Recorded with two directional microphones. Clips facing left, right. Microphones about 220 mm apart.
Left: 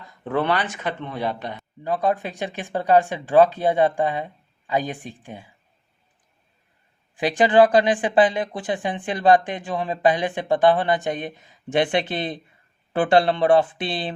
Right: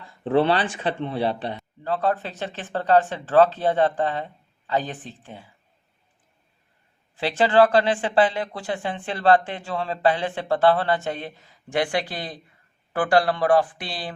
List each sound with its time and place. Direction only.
0.3 s speech: 30° right (ahead or behind)
1.5 s speech: 15° left (ahead or behind)
7.2 s speech: 15° left (ahead or behind)